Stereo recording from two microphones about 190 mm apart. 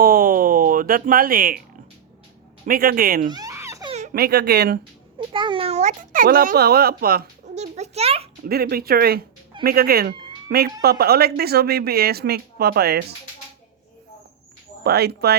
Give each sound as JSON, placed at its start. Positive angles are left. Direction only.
{"t": 0.0, "sound": "speech", "side_deg": -50}
{"t": 2.6, "sound": "a child's voice", "side_deg": -50}
{"t": 3.3, "sound": "baby laughter", "side_deg": -15}
{"t": 4.1, "sound": "speech", "side_deg": -55}
{"t": 5.3, "sound": "a child's voice", "side_deg": -25}
{"t": 7.5, "sound": "a sound", "side_deg": -35}
{"t": 8.4, "sound": "a child's voice", "side_deg": -55}
{"t": 14.8, "sound": "speech", "side_deg": -55}